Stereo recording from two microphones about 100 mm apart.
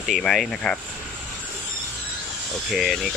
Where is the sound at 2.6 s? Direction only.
Centre (ahead or behind).